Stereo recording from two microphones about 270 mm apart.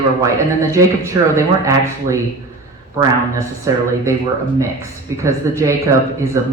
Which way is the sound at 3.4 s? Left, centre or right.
Centre.